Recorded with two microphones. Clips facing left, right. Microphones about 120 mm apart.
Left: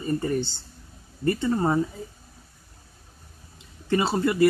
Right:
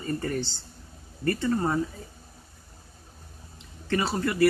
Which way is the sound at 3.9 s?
25° left (ahead or behind).